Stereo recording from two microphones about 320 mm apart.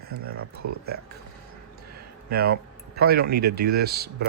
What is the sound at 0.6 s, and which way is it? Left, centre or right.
Speech, right.